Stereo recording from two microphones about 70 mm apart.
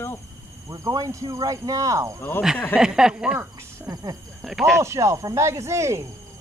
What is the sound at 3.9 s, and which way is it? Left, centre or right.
Speech, right.